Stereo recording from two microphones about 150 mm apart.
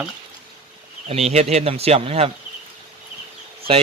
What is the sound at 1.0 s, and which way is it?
Speech, 45° right (ahead or behind).